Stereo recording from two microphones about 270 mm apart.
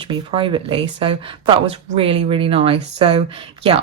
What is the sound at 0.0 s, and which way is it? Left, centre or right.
A woman's voice, centre.